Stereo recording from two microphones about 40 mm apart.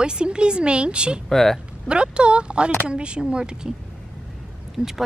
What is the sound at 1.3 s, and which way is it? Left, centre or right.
Speech, centre.